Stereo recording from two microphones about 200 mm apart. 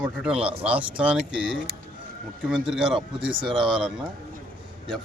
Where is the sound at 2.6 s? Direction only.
5° right (ahead or behind).